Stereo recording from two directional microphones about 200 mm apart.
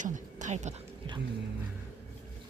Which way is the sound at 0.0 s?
40° right (ahead or behind).